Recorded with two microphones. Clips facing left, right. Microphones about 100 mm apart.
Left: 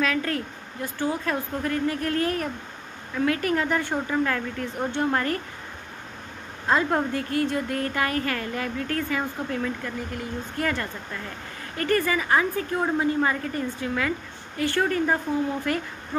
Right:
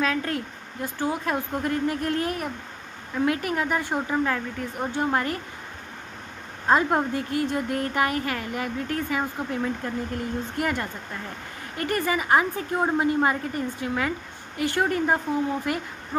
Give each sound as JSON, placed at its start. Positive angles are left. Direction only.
{"t": 0.0, "sound": "speech", "side_deg": -20}
{"t": 6.7, "sound": "a woman's voice", "side_deg": -15}